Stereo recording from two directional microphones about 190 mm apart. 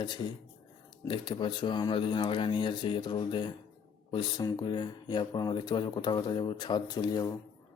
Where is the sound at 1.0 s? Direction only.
25° left (ahead or behind).